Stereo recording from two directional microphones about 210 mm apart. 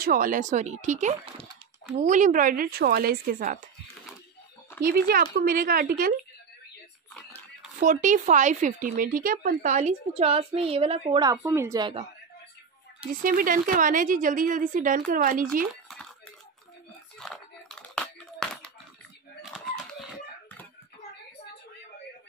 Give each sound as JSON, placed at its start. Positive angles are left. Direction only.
{"t": 0.0, "sound": "speech", "side_deg": -40}
{"t": 4.8, "sound": "speech", "side_deg": -45}
{"t": 7.2, "sound": "pig", "side_deg": 5}
{"t": 7.8, "sound": "speech", "side_deg": -35}
{"t": 13.1, "sound": "speech", "side_deg": -40}
{"t": 15.7, "sound": "a sound", "side_deg": 0}
{"t": 17.2, "sound": "a sound", "side_deg": 5}